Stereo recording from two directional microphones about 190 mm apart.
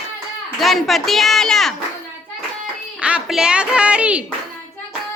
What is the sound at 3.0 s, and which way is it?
A woman's voice, 5° right (ahead or behind).